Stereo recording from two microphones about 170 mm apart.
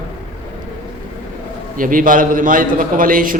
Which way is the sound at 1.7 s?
55° right (ahead or behind).